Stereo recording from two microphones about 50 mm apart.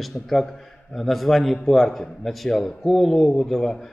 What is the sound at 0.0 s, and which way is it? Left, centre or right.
A man's voice, centre.